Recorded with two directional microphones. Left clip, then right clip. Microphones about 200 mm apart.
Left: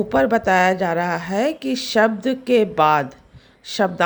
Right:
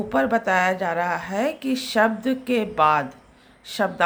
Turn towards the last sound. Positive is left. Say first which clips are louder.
# left 4 dB
turn(degrees=50)  # may be behind; listen again after turning